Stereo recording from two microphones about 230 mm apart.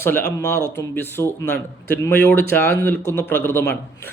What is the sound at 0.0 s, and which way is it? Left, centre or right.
Speech, centre.